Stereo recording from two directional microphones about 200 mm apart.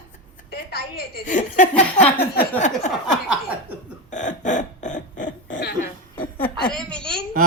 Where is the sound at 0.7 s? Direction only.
50° left (ahead or behind).